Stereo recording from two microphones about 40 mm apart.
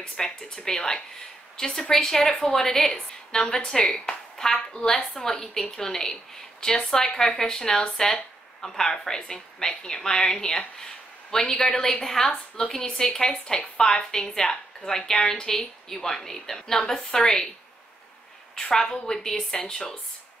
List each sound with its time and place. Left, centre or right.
0.2 s speech: centre
18.5 s speech: centre